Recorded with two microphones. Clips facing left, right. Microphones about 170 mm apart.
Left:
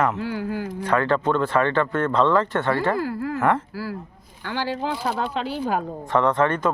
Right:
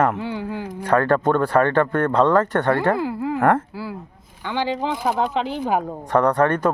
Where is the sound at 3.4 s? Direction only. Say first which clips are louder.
Right 4 dB; 50° right (ahead or behind).